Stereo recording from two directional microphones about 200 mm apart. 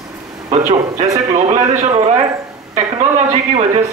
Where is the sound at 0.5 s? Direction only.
35° right (ahead or behind).